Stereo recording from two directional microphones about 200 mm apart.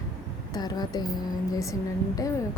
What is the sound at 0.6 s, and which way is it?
A woman's voice, 20° left (ahead or behind).